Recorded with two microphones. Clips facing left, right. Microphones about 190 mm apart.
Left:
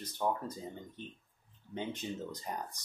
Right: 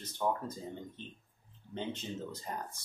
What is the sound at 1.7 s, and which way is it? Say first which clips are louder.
Speech: even; 15° left (ahead or behind).